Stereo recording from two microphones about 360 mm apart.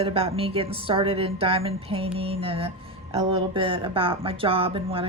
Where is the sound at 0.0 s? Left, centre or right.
Centre.